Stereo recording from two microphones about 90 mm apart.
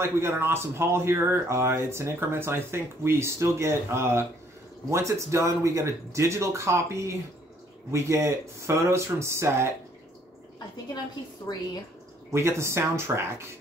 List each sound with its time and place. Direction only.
0.0 s speech: 25° right (ahead or behind)
11.5 s speech: 45° left (ahead or behind)
12.3 s speech: 30° right (ahead or behind)